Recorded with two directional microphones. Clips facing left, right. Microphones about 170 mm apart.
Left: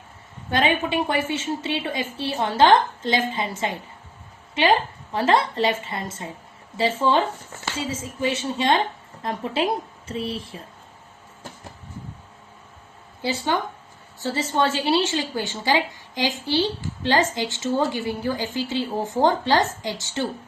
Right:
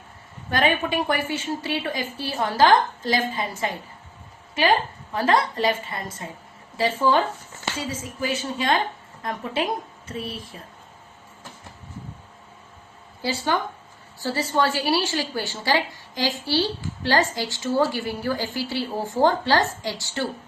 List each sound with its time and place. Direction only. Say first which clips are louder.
0.5 s a woman's voice: left 1 dB; 25° left (ahead or behind)
13.2 s a woman's voice: even; 20° left (ahead or behind)